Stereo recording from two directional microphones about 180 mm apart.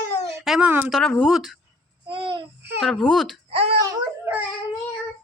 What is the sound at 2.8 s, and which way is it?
Speech, 5° left (ahead or behind).